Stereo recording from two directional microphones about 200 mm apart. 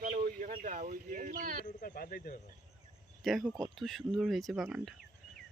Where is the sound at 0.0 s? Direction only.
40° right (ahead or behind).